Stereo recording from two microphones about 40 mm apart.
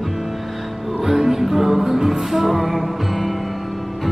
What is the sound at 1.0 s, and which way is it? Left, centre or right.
Music, centre.